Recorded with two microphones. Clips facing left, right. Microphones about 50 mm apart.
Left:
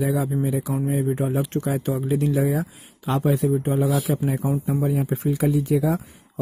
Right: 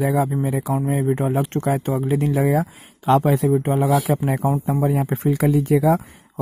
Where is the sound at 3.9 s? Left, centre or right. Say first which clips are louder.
Right 4 dB; right.